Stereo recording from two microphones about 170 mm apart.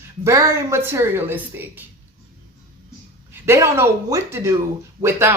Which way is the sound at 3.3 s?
15° right (ahead or behind).